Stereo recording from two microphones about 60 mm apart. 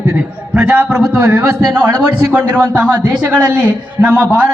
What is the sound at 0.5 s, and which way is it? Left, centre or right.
Speech, right.